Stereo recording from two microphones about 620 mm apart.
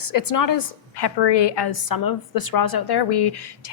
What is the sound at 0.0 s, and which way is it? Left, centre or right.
A woman's voice, left.